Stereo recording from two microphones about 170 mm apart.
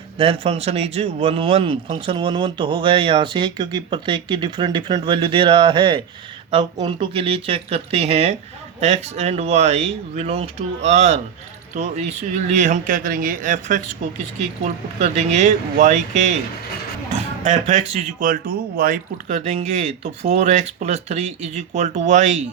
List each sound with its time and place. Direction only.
0.2 s speech: 35° right (ahead or behind)